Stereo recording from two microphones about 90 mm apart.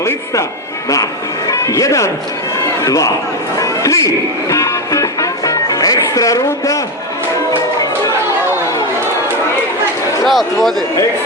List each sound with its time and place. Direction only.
1.5 s a man's voice: 35° left (ahead or behind)
3.6 s music: 40° left (ahead or behind)
10.2 s a man's voice: centre (ahead or behind)